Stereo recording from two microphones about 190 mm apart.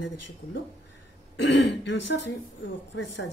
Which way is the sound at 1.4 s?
70° left (ahead or behind).